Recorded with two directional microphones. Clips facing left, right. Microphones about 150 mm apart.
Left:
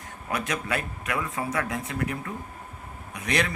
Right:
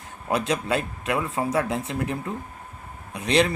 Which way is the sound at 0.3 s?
30° right (ahead or behind).